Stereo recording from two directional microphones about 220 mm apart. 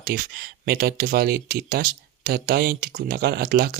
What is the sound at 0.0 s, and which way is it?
Speech, 40° right (ahead or behind).